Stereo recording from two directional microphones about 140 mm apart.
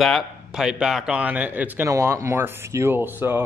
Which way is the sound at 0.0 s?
Centre (ahead or behind).